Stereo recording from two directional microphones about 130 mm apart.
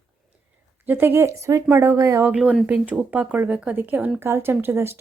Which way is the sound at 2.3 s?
5° right (ahead or behind).